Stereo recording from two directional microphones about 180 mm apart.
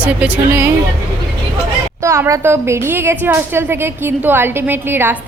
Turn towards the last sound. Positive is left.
turn(degrees=-10)  # may be behind; listen again after turning